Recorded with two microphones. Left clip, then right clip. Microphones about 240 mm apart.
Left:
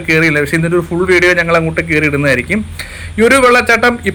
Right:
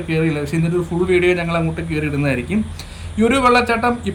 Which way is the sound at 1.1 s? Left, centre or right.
Centre.